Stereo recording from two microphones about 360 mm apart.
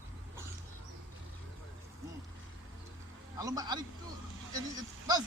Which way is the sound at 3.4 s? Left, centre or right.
Centre.